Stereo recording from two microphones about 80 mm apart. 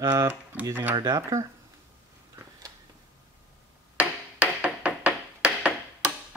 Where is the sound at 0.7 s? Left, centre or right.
Right.